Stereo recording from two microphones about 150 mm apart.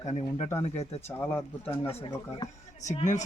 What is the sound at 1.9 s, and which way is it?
Speech, 30° left (ahead or behind).